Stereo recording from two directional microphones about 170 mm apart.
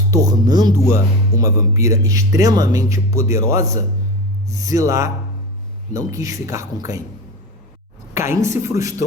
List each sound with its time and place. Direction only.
0.1 s speech: 20° right (ahead or behind)
8.1 s a woman's voice: 15° right (ahead or behind)